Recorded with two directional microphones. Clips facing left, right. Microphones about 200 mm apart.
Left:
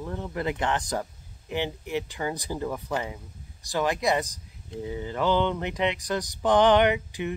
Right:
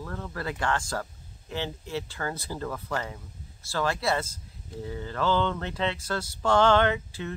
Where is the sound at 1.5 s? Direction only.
15° left (ahead or behind).